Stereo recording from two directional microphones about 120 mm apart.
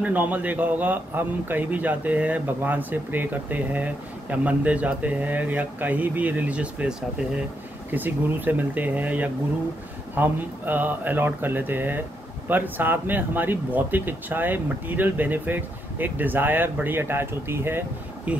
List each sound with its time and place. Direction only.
0.0 s a man's voice: 15° right (ahead or behind)